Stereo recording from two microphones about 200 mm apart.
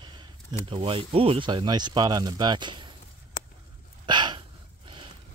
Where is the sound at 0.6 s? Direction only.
25° right (ahead or behind).